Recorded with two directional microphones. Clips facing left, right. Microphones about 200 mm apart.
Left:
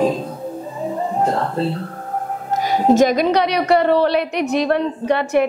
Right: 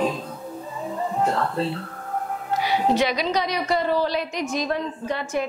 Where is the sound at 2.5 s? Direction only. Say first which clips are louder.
Left 6 dB; 45° left (ahead or behind).